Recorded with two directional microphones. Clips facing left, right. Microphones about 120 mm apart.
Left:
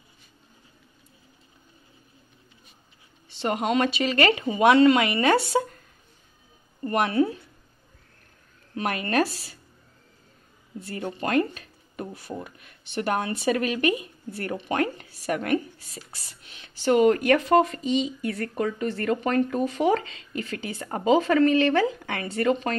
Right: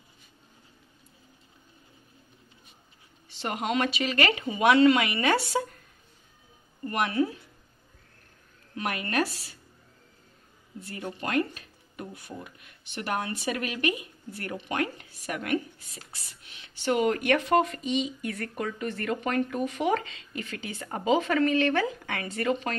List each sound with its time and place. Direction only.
3.3 s speech: 25° left (ahead or behind)
6.8 s a woman's voice: 30° left (ahead or behind)
8.7 s speech: 35° left (ahead or behind)
11.1 s speech: 30° left (ahead or behind)
16.8 s speech: 35° left (ahead or behind)